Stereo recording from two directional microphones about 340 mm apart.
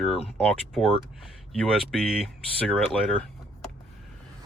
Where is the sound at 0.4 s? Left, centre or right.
Centre.